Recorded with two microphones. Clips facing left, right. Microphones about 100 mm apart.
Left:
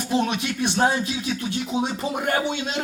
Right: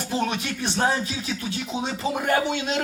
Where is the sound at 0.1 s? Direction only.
15° left (ahead or behind).